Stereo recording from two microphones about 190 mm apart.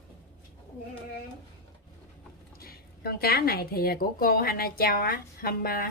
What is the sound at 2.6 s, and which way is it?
A woman's voice, 55° left (ahead or behind).